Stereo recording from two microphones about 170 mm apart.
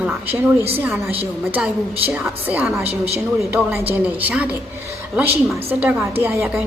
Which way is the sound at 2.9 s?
35° right (ahead or behind).